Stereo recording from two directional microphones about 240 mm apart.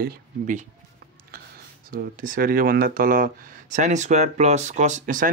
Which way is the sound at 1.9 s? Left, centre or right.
Right.